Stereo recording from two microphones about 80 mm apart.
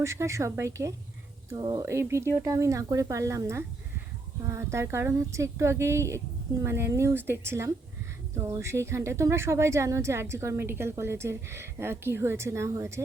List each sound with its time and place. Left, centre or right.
0.0 s speech: right
1.5 s speech: right
1.8 s speech: right